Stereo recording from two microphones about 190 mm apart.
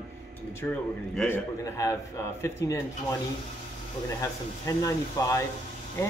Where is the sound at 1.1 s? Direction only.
5° left (ahead or behind).